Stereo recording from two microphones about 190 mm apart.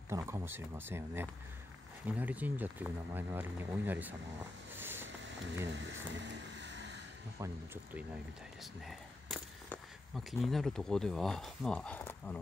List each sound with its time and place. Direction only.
0.1 s speech: 15° right (ahead or behind)
4.7 s a sound: 10° right (ahead or behind)
5.7 s vehicle: 70° right (ahead or behind)
7.3 s speech: 15° right (ahead or behind)
9.7 s speech: centre (ahead or behind)